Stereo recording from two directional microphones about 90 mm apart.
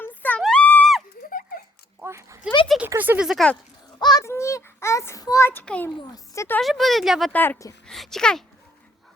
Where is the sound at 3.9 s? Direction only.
50° left (ahead or behind).